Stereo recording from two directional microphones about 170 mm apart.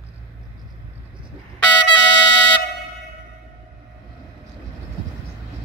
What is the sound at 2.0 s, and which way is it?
Music, 90° left.